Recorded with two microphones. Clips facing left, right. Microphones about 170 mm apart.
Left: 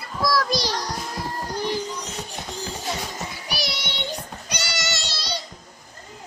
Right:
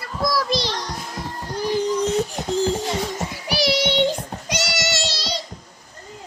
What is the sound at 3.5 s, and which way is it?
Child singing, 90° right.